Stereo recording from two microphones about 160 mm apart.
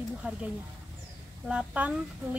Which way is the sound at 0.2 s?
10° right (ahead or behind).